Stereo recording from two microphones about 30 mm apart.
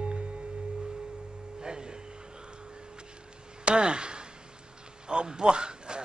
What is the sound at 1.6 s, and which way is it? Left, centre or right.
Music, right.